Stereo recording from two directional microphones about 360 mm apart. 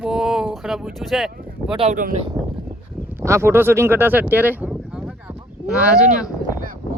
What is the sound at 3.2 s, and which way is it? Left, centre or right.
Speech, centre.